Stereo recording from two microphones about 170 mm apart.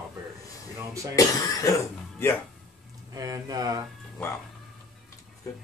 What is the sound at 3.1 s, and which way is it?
Speech, 20° right (ahead or behind).